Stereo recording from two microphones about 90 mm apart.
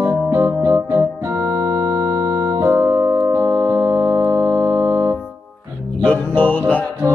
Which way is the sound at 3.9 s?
35° right (ahead or behind).